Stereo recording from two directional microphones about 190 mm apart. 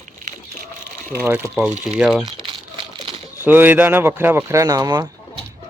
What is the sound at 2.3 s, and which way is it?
Crumpling, 25° right (ahead or behind).